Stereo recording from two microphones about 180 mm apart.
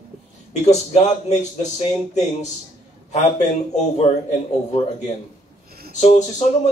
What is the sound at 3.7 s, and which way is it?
Speech, 40° left (ahead or behind).